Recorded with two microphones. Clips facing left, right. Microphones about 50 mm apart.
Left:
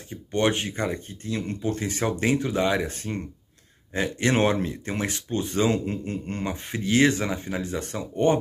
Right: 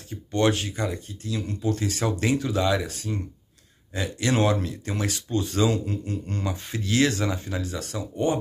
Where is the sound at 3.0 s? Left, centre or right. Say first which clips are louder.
Even; left.